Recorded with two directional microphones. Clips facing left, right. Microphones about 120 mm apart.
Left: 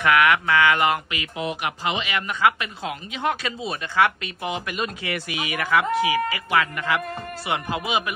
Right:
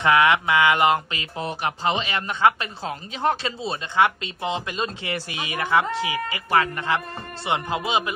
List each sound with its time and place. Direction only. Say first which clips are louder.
0.0 s speech: right 1 dB; 25° right (ahead or behind)